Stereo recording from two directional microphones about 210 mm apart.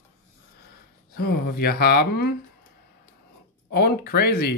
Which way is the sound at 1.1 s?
45° left (ahead or behind).